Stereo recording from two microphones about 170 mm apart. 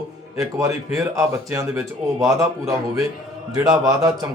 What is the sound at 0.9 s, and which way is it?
Speech, 20° right (ahead or behind).